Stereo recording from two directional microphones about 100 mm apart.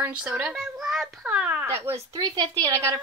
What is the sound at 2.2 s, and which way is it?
Speech, 50° right (ahead or behind).